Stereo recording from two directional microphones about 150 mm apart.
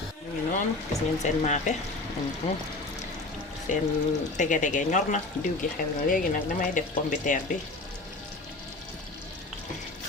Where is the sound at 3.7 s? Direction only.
55° left (ahead or behind).